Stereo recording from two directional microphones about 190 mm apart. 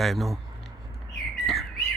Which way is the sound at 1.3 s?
Centre (ahead or behind).